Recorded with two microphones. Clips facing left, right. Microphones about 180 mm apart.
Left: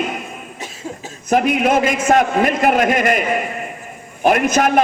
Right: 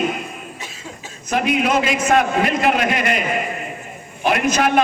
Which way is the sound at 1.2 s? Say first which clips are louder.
Left 3 dB; 50° left (ahead or behind).